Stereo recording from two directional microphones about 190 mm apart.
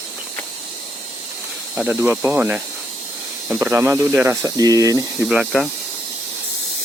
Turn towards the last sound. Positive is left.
turn(degrees=0)  # may be behind; listen again after turning